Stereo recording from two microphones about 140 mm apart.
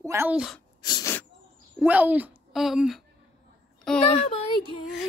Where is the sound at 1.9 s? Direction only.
10° right (ahead or behind).